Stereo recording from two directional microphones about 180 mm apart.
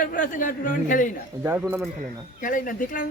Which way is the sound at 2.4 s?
50° left (ahead or behind).